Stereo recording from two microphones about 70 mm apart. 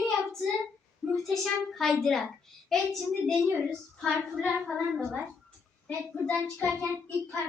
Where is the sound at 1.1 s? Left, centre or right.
Centre.